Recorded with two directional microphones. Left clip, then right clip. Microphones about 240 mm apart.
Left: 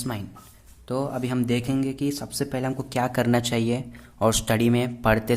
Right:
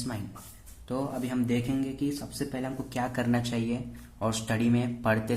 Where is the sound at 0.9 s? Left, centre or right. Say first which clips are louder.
Left 5 dB; left.